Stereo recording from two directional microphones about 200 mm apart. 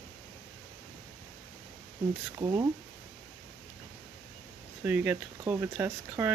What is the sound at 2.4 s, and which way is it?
Speech, 15° right (ahead or behind).